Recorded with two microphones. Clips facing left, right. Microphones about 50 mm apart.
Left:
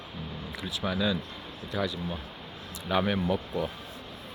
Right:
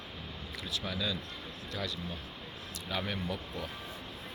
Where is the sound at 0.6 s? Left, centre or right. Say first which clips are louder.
Left 7 dB; centre.